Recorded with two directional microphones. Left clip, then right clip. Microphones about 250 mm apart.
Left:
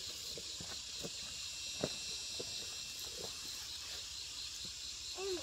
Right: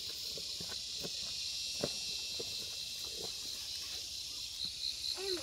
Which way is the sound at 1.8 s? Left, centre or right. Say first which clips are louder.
Right 1 dB; centre.